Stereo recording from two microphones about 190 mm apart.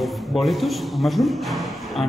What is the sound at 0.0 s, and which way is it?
A man's voice, centre (ahead or behind).